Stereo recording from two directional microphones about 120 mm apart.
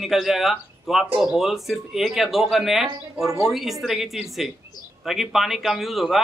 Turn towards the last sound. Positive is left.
turn(degrees=0)  # may be behind; listen again after turning